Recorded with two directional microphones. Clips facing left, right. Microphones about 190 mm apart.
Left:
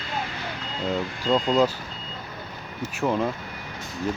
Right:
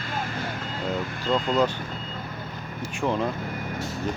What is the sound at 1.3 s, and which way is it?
Speech, centre (ahead or behind).